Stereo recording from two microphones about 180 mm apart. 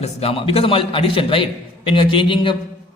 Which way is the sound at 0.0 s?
35° left (ahead or behind).